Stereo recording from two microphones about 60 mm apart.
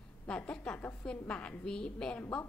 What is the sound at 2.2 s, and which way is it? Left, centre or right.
Speech, left.